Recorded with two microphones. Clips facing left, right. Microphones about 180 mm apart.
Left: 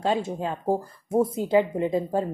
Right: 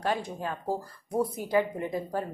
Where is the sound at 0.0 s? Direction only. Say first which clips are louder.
Left 5 dB; 25° left (ahead or behind).